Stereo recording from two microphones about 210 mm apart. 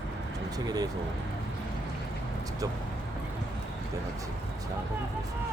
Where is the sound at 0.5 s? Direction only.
20° right (ahead or behind).